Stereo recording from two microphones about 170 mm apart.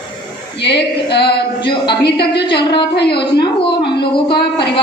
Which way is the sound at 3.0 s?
30° left (ahead or behind).